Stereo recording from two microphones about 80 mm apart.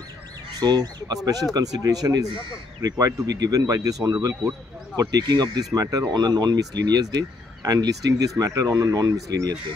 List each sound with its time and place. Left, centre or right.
0.6 s speech: right
5.3 s speech: right
5.7 s speech: right
6.1 s speech: right